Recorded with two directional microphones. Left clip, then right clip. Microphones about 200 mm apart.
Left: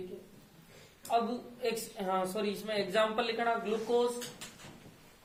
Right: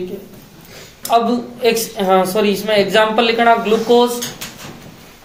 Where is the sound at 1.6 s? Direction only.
15° right (ahead or behind).